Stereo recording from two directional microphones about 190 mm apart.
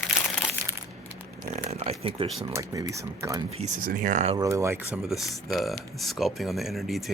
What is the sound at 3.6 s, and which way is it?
Speech, 40° right (ahead or behind).